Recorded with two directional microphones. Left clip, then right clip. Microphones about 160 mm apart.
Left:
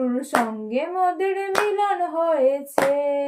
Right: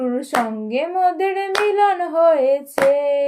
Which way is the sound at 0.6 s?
35° right (ahead or behind).